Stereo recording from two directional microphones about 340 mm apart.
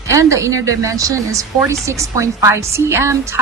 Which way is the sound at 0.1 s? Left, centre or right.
Centre.